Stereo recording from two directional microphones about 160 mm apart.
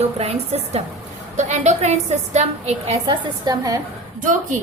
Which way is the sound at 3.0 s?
25° right (ahead or behind).